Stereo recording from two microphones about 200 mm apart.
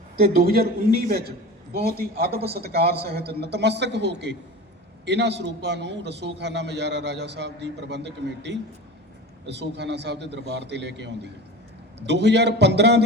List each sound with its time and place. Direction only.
0.2 s a man's voice: 50° right (ahead or behind)